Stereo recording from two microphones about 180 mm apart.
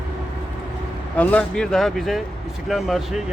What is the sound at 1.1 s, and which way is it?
Speech, 10° left (ahead or behind).